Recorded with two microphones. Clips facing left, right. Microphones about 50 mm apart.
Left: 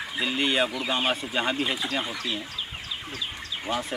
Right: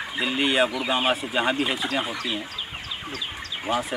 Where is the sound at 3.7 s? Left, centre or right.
Centre.